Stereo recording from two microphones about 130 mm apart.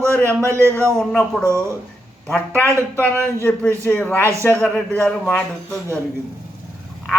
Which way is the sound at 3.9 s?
10° left (ahead or behind).